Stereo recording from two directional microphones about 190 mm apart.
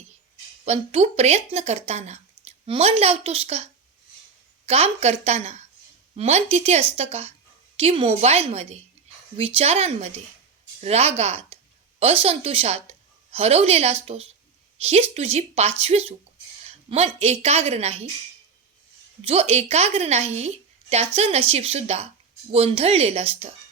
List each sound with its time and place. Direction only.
0.6 s a woman's voice: 35° right (ahead or behind)
19.2 s speech: 30° right (ahead or behind)